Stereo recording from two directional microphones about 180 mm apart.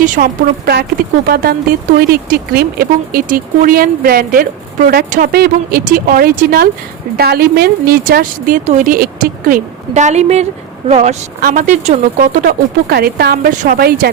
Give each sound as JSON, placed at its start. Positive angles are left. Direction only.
{"t": 0.0, "sound": "a woman's voice", "side_deg": -50}
{"t": 11.3, "sound": "a woman's voice", "side_deg": -50}